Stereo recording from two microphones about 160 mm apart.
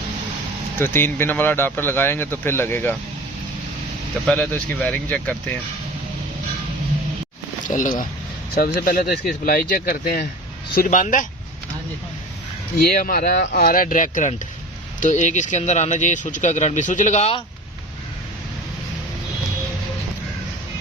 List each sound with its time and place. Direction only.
0.8 s speech: 15° left (ahead or behind)
4.3 s speech: 5° left (ahead or behind)
7.7 s speech: 50° left (ahead or behind)
8.5 s speech: 70° left (ahead or behind)
10.8 s speech: 50° left (ahead or behind)
13.0 s speech: 60° left (ahead or behind)
13.5 s speech: 70° left (ahead or behind); by 17.4 s 40° left (ahead or behind)